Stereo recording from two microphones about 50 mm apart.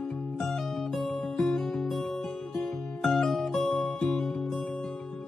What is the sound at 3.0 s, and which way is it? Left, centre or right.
Music, centre.